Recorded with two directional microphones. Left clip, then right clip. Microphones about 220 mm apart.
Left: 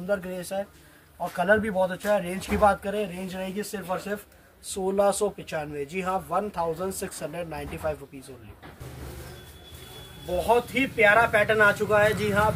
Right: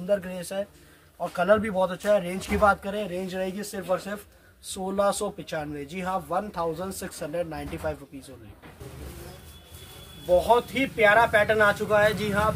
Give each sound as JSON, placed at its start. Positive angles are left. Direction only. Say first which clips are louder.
{"t": 0.0, "sound": "speech", "louder": "right 2 dB", "side_deg": -15}
{"t": 10.4, "sound": "speech", "louder": "right 1 dB", "side_deg": -5}